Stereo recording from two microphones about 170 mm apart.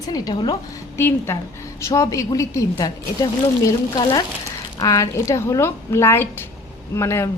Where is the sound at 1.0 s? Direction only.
15° left (ahead or behind).